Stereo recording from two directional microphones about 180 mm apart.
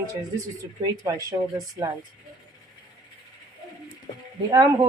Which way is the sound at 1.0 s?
20° right (ahead or behind).